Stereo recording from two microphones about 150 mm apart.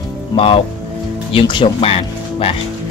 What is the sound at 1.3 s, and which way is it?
Speech, 35° left (ahead or behind).